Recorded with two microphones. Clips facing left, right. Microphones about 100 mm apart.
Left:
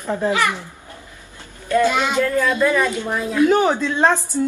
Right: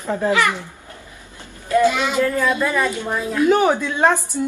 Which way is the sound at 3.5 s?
15° right (ahead or behind).